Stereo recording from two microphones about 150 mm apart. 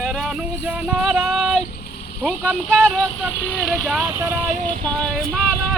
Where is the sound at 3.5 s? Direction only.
5° right (ahead or behind).